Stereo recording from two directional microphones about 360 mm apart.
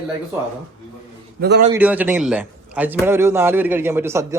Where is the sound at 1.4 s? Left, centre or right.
Right.